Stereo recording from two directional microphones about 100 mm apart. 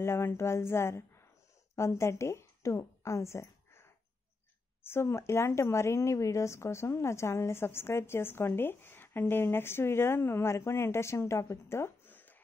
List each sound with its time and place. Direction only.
0.0 s a woman's voice: 25° left (ahead or behind)
4.8 s speech: 25° left (ahead or behind)